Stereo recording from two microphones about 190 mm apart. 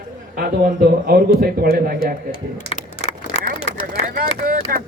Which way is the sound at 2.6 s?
35° left (ahead or behind).